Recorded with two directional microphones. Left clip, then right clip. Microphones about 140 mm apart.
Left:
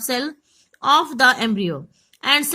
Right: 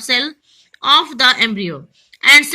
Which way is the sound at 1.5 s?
30° left (ahead or behind).